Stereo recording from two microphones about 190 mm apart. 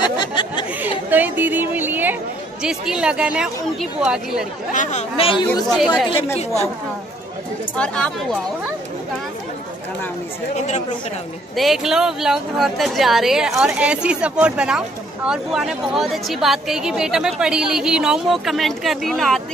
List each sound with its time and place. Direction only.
0.2 s a sound: 25° left (ahead or behind)
1.1 s a woman's voice: 10° right (ahead or behind)
4.7 s speech: 35° left (ahead or behind)
5.7 s a woman's voice: centre (ahead or behind)
7.7 s a woman's voice: 5° left (ahead or behind)
11.5 s a woman's voice: centre (ahead or behind)